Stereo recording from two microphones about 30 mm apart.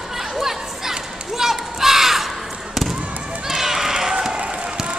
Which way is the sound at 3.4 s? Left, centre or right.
Centre.